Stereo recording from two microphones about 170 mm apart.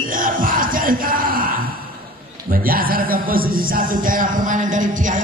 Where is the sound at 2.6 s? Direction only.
60° right (ahead or behind).